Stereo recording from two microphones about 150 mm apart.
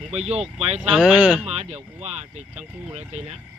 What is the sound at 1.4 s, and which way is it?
Speech, 45° right (ahead or behind).